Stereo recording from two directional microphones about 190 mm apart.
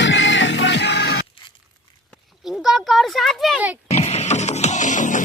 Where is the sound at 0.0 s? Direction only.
75° left (ahead or behind).